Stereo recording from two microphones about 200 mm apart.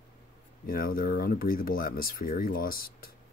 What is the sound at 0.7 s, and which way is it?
Speech, 45° left (ahead or behind).